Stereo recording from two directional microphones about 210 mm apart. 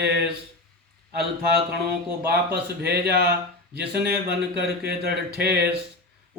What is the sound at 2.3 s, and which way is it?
Speech, 50° right (ahead or behind).